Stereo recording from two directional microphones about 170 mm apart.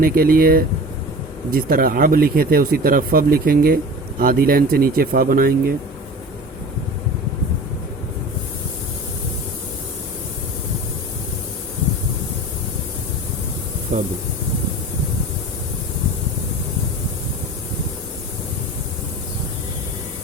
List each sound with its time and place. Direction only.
0.0 s speech: 60° right (ahead or behind)